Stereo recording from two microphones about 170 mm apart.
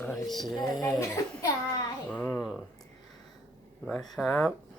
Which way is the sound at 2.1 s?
10° left (ahead or behind).